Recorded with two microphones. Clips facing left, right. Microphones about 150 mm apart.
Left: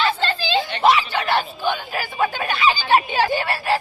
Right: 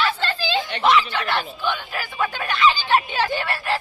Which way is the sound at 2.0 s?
30° left (ahead or behind).